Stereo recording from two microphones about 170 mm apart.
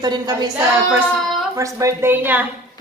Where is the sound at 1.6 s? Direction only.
20° right (ahead or behind).